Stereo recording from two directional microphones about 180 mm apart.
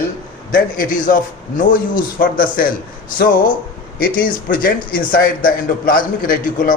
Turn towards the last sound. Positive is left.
turn(degrees=50)  # may be behind; listen again after turning